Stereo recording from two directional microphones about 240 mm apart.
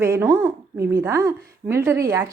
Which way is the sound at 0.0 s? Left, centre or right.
Centre.